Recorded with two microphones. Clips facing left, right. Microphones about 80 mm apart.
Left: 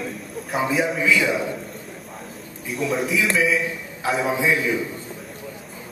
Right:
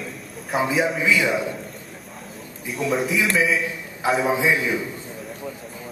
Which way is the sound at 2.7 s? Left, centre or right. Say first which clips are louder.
Even; centre.